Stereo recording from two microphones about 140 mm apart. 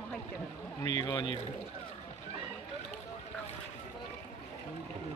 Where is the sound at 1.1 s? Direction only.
35° left (ahead or behind).